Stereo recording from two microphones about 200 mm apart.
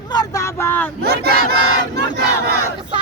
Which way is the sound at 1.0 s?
50° right (ahead or behind).